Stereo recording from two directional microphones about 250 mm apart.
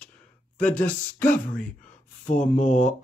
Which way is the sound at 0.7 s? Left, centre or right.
Centre.